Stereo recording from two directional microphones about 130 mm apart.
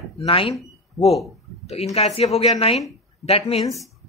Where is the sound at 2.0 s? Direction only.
55° left (ahead or behind).